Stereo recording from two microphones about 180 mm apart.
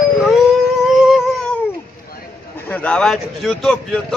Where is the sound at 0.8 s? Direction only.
5° right (ahead or behind).